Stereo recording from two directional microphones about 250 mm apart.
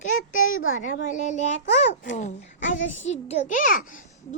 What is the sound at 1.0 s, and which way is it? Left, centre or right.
A woman's voice, left.